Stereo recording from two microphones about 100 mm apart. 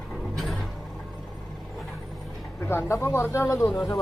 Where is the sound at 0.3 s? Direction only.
Centre (ahead or behind).